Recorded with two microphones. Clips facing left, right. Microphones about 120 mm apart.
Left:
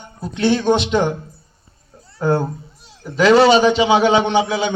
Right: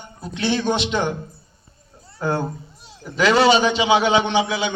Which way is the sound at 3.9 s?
35° left (ahead or behind).